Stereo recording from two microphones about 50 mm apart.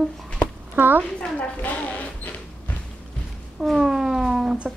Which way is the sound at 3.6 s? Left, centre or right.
Centre.